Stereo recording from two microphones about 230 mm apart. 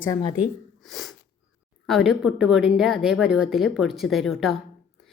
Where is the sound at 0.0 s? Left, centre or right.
Centre.